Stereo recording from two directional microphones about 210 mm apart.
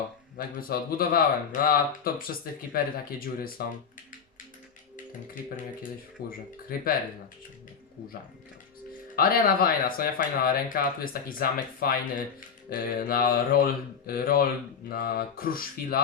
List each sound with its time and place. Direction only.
0.3 s speech: 45° left (ahead or behind)
6.2 s speech: 45° left (ahead or behind)
9.1 s speech: 45° left (ahead or behind)